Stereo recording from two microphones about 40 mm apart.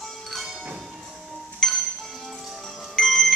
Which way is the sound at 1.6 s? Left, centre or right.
Centre.